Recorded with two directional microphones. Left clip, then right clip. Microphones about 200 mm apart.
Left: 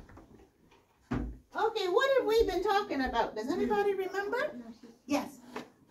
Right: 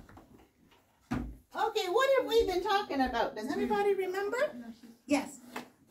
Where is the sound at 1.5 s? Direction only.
25° right (ahead or behind).